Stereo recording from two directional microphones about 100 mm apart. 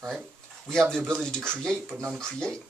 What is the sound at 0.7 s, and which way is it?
Speech, 5° left (ahead or behind).